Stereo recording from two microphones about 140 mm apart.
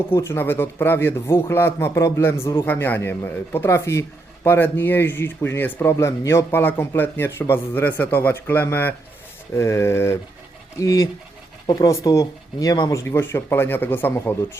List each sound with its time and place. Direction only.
0.1 s speech: 15° left (ahead or behind)